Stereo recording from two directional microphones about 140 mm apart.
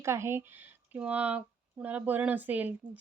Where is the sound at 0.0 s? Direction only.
20° right (ahead or behind).